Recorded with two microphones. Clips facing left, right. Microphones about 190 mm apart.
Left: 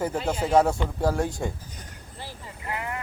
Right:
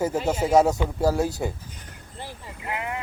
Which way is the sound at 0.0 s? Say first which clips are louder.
Right 3 dB; 10° right (ahead or behind).